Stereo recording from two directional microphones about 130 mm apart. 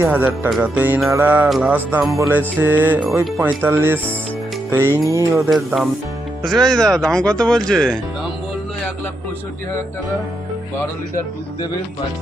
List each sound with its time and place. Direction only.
0.0 s speech: 15° right (ahead or behind)
4.7 s music: 20° right (ahead or behind)
5.4 s speech: centre (ahead or behind)